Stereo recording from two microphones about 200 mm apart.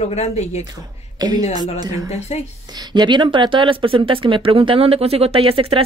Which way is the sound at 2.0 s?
35° left (ahead or behind).